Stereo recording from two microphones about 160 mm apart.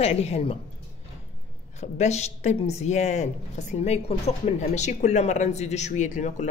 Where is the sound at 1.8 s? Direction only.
45° left (ahead or behind).